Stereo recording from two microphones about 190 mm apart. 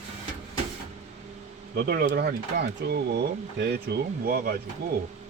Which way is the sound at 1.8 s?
55° right (ahead or behind).